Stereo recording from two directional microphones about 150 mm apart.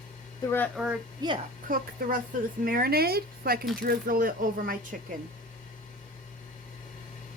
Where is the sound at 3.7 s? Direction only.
70° right (ahead or behind).